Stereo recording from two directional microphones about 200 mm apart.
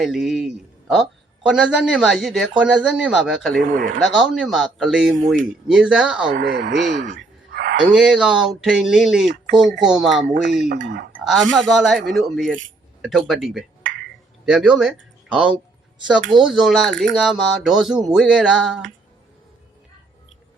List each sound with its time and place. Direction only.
0.0 s speech: centre (ahead or behind)
6.3 s speech: 60° right (ahead or behind)
7.1 s a sound: 60° right (ahead or behind)
7.9 s speech: 5° right (ahead or behind)
10.7 s speech: 55° right (ahead or behind)
11.2 s speech: centre (ahead or behind)